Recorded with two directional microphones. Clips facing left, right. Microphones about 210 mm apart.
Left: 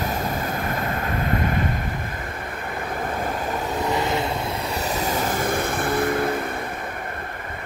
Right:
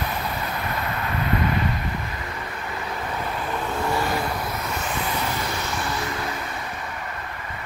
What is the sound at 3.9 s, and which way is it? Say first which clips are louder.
Vehicle: left 2 dB; 20° left (ahead or behind).